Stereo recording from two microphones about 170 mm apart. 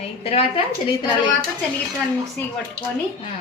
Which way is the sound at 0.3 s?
35° left (ahead or behind).